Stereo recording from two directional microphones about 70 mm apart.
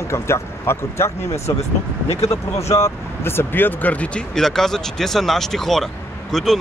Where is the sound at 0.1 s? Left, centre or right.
Left.